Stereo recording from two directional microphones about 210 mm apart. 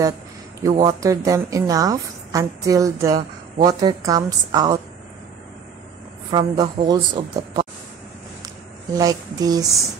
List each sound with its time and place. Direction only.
0.6 s a woman's voice: 15° right (ahead or behind)
6.3 s a woman's voice: 20° right (ahead or behind)
8.9 s a woman's voice: 20° right (ahead or behind)